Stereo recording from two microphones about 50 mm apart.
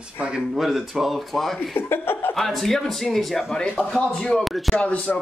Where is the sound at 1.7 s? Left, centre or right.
Left.